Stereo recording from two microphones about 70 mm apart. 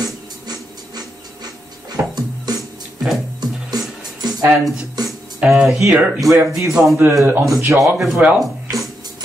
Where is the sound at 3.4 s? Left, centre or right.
Right.